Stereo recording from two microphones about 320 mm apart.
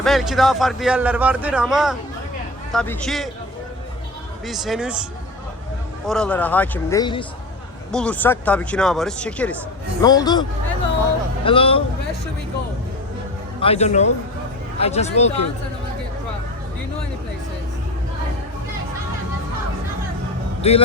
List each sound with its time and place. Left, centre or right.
0.0 s a man's voice: centre
4.4 s a man's voice: centre
6.1 s a man's voice: centre
11.4 s a man's voice: centre
13.6 s speech: centre
20.6 s speech: centre